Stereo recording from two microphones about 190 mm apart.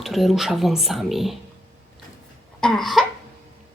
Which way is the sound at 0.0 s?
Centre (ahead or behind).